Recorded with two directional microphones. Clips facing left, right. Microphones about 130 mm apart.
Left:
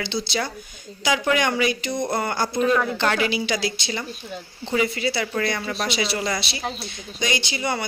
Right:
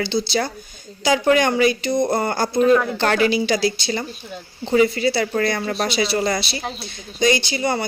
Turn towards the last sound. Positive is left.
turn(degrees=-35)  # may be behind; listen again after turning